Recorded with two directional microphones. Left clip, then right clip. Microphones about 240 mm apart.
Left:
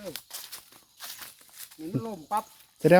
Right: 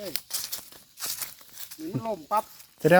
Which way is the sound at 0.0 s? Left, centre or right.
Right.